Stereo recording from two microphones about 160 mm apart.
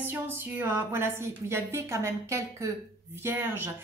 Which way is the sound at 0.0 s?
15° right (ahead or behind).